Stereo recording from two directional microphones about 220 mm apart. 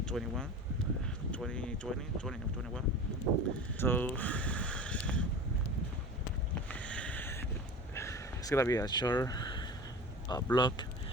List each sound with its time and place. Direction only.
0.0 s speech: 5° left (ahead or behind)
6.7 s a sound: 5° left (ahead or behind)
7.9 s speech: 15° left (ahead or behind)